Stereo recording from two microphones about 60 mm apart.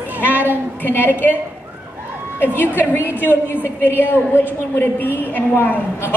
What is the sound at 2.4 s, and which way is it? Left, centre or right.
Speech, left.